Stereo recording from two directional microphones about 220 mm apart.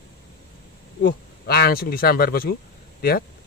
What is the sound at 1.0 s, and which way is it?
Speech, 45° left (ahead or behind).